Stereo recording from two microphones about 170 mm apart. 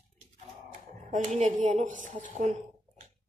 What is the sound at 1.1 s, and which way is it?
A woman's voice, 40° right (ahead or behind).